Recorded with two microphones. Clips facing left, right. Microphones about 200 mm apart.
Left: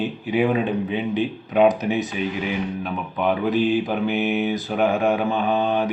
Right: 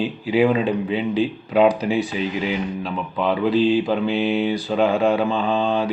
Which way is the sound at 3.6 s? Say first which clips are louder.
Right 3 dB; 20° left (ahead or behind).